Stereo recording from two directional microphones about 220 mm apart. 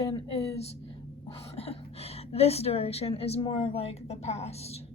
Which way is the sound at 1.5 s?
25° left (ahead or behind).